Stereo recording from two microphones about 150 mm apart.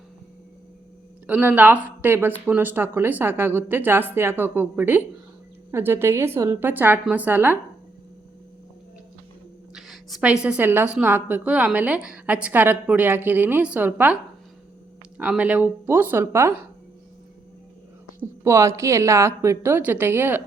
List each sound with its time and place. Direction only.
1.3 s a woman's voice: 10° right (ahead or behind)
9.7 s a sound: centre (ahead or behind)
10.4 s a woman's voice: 10° right (ahead or behind)
15.2 s a woman's voice: 10° right (ahead or behind)
18.2 s a woman's voice: 20° right (ahead or behind)